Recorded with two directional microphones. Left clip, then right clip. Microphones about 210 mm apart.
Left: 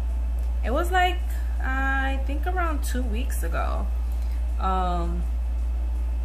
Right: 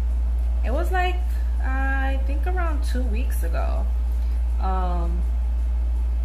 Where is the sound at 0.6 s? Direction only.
15° left (ahead or behind).